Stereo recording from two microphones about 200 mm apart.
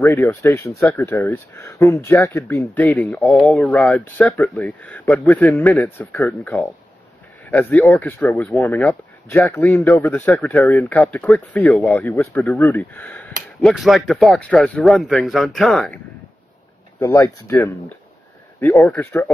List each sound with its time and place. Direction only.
0.0 s speech: 15° left (ahead or behind)
8.6 s speech: 10° left (ahead or behind)
11.9 s a man's voice: 15° left (ahead or behind)
17.0 s speech: 15° left (ahead or behind)